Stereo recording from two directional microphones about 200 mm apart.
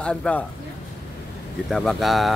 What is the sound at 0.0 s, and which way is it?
Speech, 5° left (ahead or behind).